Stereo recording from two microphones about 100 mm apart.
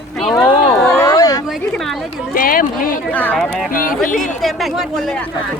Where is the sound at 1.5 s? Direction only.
Centre (ahead or behind).